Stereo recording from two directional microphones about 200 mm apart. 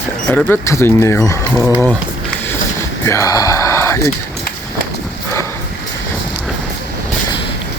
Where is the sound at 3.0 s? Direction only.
15° left (ahead or behind).